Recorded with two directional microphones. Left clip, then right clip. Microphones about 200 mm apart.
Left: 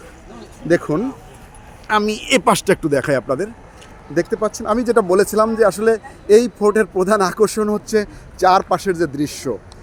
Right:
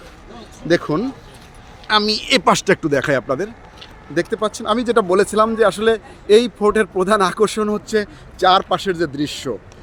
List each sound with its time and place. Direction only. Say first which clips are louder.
0.7 s speech: even; 10° right (ahead or behind); by 7.7 s 5° left (ahead or behind)
7.7 s speech: left 1 dB; 5° right (ahead or behind)